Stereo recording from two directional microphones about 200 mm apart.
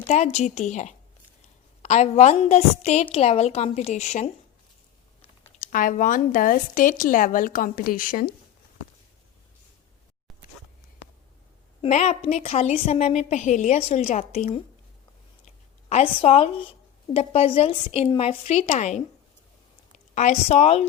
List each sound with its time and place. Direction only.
0.1 s a woman's voice: 35° left (ahead or behind)
5.5 s a woman's voice: 40° left (ahead or behind)
11.8 s a woman's voice: 35° left (ahead or behind)
20.1 s a woman's voice: 35° left (ahead or behind)